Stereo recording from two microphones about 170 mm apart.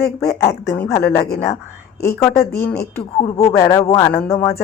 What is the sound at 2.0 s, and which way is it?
Speech, 15° left (ahead or behind).